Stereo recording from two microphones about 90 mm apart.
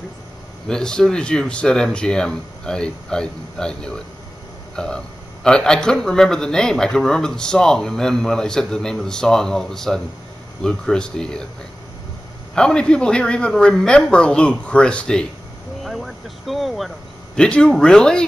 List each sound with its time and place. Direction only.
0.7 s a man's voice: 10° left (ahead or behind)
12.5 s a man's voice: 10° left (ahead or behind)
15.8 s a sound: centre (ahead or behind)
17.4 s a man's voice: 10° left (ahead or behind)